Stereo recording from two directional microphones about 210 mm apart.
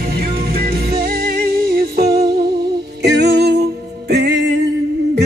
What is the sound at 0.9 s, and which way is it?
Music, 45° right (ahead or behind).